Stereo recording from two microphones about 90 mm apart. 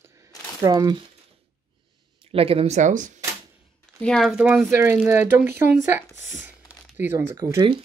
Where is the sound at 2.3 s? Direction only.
90° right.